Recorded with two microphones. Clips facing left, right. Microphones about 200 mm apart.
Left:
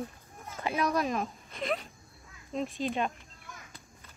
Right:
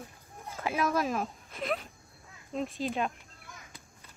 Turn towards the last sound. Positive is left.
turn(degrees=0)  # may be behind; listen again after turning